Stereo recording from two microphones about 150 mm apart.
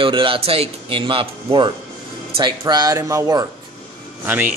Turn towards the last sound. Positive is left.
turn(degrees=-15)  # may be behind; listen again after turning